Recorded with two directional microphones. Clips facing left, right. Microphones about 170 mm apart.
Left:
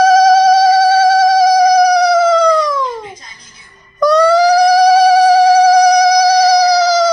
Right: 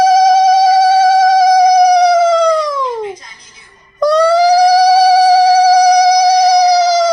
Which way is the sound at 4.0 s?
25° right (ahead or behind).